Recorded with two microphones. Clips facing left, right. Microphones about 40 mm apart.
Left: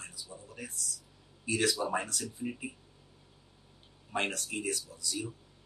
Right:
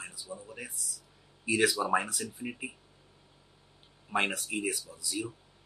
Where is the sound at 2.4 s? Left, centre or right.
Right.